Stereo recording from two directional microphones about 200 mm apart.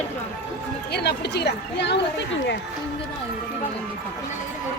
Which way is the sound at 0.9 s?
55° left (ahead or behind).